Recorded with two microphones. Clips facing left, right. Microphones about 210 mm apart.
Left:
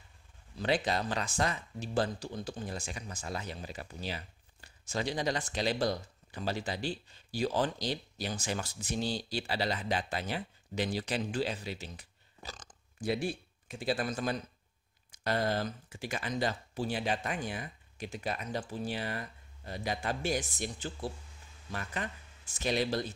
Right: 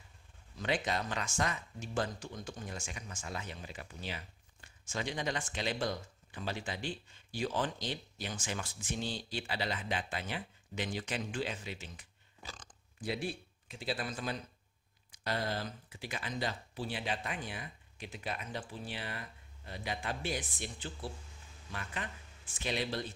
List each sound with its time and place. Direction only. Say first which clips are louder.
0.6 s speech: left 4 dB; 35° left (ahead or behind)
22.5 s speech: left 5 dB; 40° left (ahead or behind)